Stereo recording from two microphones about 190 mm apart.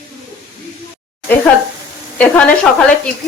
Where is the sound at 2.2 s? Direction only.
5° left (ahead or behind).